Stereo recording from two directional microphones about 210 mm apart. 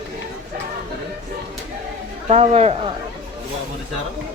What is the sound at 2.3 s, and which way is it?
Speech, 30° right (ahead or behind).